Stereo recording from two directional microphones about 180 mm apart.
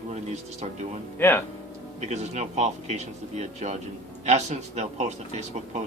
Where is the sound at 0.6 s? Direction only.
35° right (ahead or behind).